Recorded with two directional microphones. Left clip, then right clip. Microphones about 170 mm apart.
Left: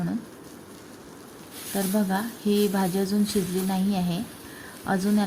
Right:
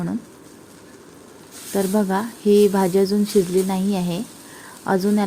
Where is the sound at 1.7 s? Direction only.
30° right (ahead or behind).